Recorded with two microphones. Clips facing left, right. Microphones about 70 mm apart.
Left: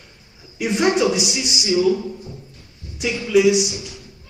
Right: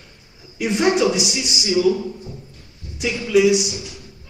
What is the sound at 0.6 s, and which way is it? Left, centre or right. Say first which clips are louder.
Speech: even; centre.